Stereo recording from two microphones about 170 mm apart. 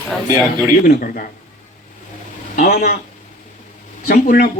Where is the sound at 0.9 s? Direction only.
55° left (ahead or behind).